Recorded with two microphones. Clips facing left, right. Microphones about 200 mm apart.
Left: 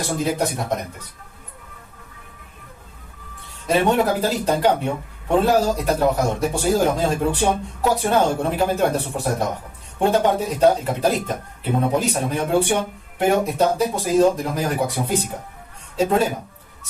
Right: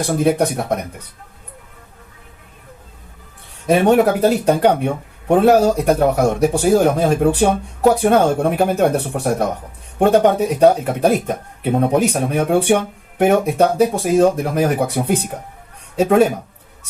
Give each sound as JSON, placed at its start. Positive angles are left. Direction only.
{"t": 0.2, "sound": "speech", "side_deg": -60}
{"t": 3.8, "sound": "speech", "side_deg": -65}